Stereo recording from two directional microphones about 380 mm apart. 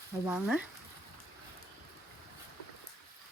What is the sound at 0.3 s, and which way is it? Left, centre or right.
Speech, centre.